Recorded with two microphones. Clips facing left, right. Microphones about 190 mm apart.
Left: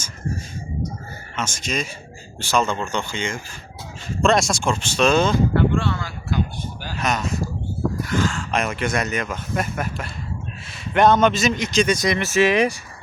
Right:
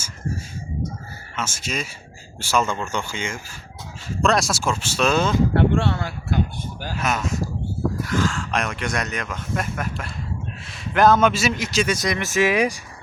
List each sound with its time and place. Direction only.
1.4 s speech: 5° right (ahead or behind)
5.5 s a sound: 65° right (ahead or behind)
6.9 s speech: 5° right (ahead or behind)